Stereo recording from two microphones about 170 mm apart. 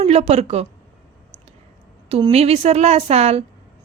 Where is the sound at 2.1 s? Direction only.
35° right (ahead or behind).